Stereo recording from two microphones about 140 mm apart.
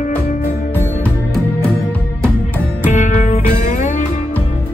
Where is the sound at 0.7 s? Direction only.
15° left (ahead or behind).